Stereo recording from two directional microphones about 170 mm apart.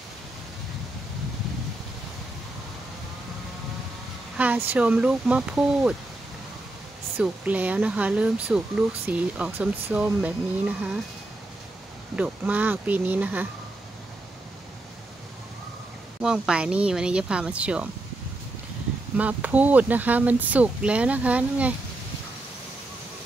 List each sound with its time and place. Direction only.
4.4 s speech: 10° right (ahead or behind)
7.2 s speech: 10° right (ahead or behind)
12.2 s speech: 10° right (ahead or behind)
16.2 s speech: 5° right (ahead or behind)
19.1 s speech: 10° right (ahead or behind)